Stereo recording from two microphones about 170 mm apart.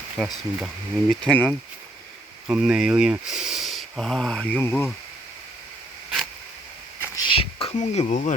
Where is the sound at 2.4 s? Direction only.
5° right (ahead or behind); by 4.9 s 10° left (ahead or behind).